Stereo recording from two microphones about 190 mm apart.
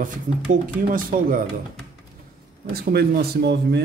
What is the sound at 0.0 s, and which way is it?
Speech, 45° right (ahead or behind).